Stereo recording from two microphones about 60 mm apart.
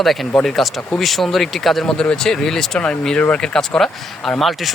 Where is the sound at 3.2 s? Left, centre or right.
Left.